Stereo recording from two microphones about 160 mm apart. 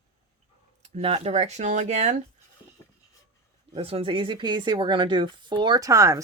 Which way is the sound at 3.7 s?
40° right (ahead or behind).